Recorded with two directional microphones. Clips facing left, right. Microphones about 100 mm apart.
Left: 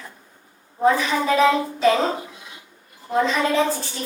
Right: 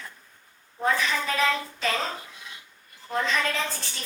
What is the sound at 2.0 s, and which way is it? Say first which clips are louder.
Speech: left 9 dB; 30° left (ahead or behind).